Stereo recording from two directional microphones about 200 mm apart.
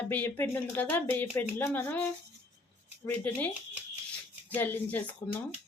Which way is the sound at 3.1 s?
10° left (ahead or behind).